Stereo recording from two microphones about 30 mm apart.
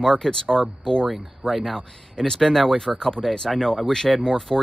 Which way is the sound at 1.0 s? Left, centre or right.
Centre.